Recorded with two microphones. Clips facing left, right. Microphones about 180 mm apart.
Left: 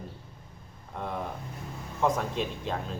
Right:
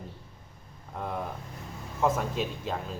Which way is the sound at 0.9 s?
Centre (ahead or behind).